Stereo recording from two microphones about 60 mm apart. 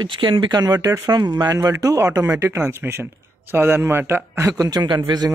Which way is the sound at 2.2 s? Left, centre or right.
Right.